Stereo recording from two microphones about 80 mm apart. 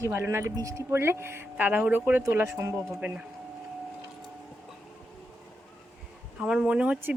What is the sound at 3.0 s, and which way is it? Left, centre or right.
Speech, centre.